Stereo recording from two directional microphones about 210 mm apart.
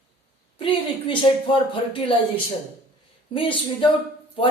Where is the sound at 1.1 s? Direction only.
25° left (ahead or behind).